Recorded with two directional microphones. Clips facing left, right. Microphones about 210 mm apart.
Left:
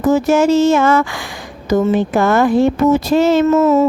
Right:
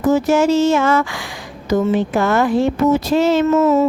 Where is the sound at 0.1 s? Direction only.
50° left (ahead or behind).